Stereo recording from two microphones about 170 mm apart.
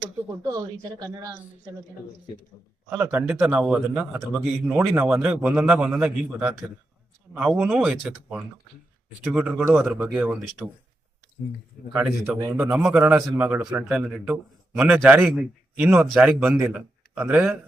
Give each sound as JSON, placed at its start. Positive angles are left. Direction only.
{"t": 0.4, "sound": "a woman's voice", "side_deg": -20}
{"t": 2.9, "sound": "a man's voice", "side_deg": -10}
{"t": 11.9, "sound": "a man's voice", "side_deg": -5}